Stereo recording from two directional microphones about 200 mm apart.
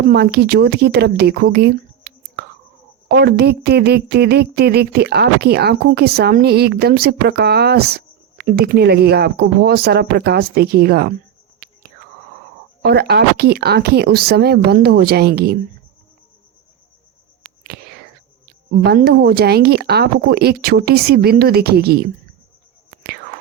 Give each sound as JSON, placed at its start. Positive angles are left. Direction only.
{"t": 0.1, "sound": "speech", "side_deg": -55}
{"t": 12.8, "sound": "speech", "side_deg": -55}
{"t": 17.6, "sound": "whispering", "side_deg": -50}
{"t": 18.4, "sound": "speech", "side_deg": -50}
{"t": 23.0, "sound": "whispering", "side_deg": -50}